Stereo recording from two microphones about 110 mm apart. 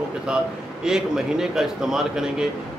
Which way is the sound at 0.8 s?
5° right (ahead or behind).